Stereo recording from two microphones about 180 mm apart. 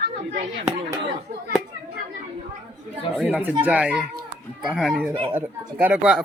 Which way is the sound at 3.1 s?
5° right (ahead or behind).